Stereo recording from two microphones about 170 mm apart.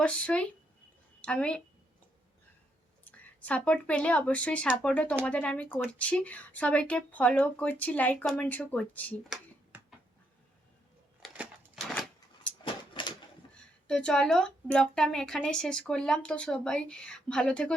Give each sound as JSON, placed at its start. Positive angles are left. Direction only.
{"t": 0.0, "sound": "speech", "side_deg": 5}
{"t": 3.0, "sound": "speech", "side_deg": 10}
{"t": 11.2, "sound": "typewriter", "side_deg": 0}
{"t": 12.6, "sound": "a sound", "side_deg": 30}
{"t": 13.8, "sound": "speech", "side_deg": 5}